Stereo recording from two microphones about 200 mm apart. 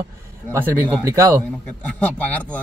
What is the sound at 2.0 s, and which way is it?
Speech, 5° left (ahead or behind).